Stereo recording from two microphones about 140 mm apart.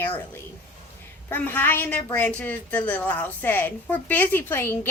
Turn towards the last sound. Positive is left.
turn(degrees=15)  # may be behind; listen again after turning